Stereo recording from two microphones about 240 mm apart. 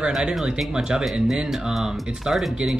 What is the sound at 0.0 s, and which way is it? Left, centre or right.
Speech, centre.